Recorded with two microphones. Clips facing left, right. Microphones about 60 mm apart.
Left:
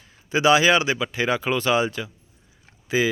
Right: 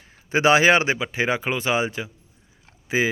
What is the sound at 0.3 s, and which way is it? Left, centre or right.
Speech, right.